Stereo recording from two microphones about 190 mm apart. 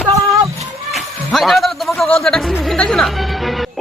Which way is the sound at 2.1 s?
5° left (ahead or behind).